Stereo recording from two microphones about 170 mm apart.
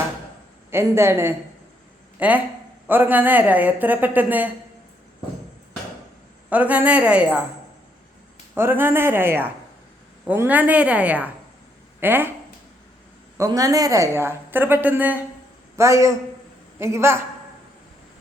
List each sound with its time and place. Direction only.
0.7 s a woman's voice: 15° right (ahead or behind)
6.5 s a woman's voice: 10° right (ahead or behind)
8.5 s a woman's voice: 15° right (ahead or behind)
13.3 s a woman's voice: 20° right (ahead or behind)